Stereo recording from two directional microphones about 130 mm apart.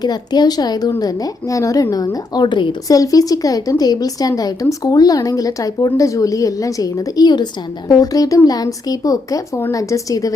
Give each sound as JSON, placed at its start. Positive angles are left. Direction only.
{"t": 0.0, "sound": "a woman's voice", "side_deg": 30}